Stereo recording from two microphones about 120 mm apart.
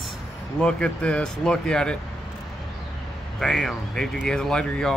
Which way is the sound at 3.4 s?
5° left (ahead or behind).